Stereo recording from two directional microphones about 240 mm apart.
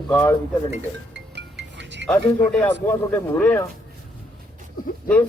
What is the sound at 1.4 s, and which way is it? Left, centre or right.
Music, right.